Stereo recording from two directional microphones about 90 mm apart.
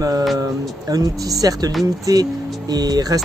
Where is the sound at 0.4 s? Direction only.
40° right (ahead or behind).